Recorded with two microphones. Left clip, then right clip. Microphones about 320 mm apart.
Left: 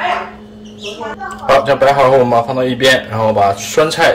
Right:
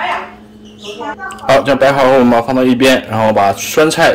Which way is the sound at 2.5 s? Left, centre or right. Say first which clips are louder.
Right 1 dB; right.